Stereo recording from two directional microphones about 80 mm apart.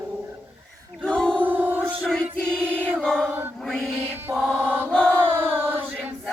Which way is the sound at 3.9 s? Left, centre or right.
Right.